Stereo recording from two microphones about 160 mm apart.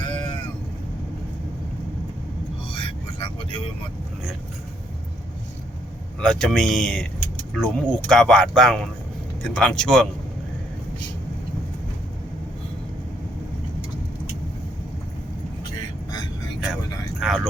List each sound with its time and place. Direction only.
0.0 s vehicle: 30° left (ahead or behind)
2.7 s vehicle: 30° left (ahead or behind)
6.1 s a man's voice: 5° left (ahead or behind)
17.2 s a sound: centre (ahead or behind)